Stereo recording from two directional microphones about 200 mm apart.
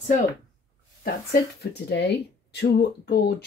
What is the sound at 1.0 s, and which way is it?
Speech, 50° left (ahead or behind).